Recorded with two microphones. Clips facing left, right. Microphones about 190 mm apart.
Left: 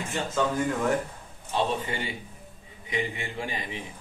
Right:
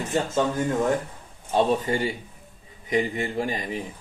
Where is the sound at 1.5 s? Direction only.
40° right (ahead or behind).